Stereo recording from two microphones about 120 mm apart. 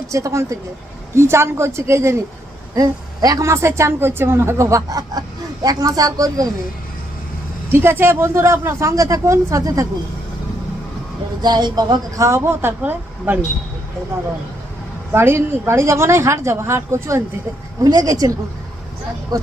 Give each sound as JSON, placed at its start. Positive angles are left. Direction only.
{"t": 0.1, "sound": "a woman's voice", "side_deg": -25}
{"t": 7.7, "sound": "a woman's voice", "side_deg": -20}
{"t": 11.4, "sound": "a woman's voice", "side_deg": -35}
{"t": 15.1, "sound": "a woman's voice", "side_deg": -20}
{"t": 17.8, "sound": "speech", "side_deg": -30}